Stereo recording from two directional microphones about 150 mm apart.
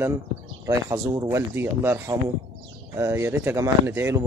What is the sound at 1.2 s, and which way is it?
Speech, 15° right (ahead or behind).